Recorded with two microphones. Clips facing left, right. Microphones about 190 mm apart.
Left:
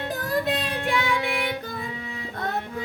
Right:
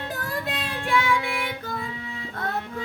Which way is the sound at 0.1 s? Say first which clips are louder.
Left 7 dB; 20° left (ahead or behind).